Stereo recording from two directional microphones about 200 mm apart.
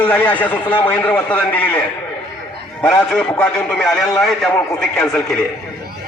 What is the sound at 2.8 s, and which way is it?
A man's voice, 5° left (ahead or behind).